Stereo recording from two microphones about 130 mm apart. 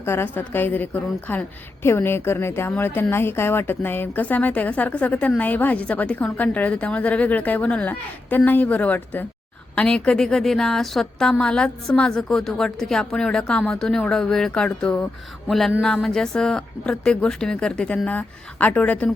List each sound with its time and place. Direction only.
0.0 s a woman's voice: 20° left (ahead or behind)